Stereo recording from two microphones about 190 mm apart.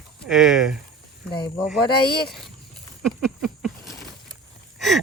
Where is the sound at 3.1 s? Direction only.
Centre (ahead or behind).